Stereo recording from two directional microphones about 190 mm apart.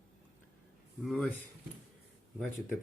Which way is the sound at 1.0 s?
Centre (ahead or behind).